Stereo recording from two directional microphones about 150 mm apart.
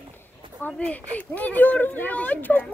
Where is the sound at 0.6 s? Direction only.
10° left (ahead or behind).